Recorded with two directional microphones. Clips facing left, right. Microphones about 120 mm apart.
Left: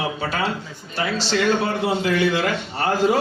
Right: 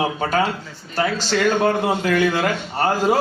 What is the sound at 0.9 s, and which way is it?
A man's voice, 45° right (ahead or behind).